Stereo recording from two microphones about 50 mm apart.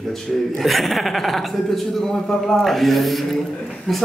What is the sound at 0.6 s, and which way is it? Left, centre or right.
Speech, centre.